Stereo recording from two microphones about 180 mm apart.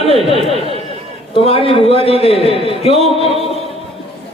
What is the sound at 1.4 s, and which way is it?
Speech, 30° left (ahead or behind).